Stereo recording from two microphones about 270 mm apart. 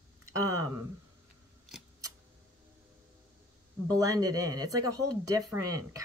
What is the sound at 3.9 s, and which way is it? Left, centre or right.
Speech, centre.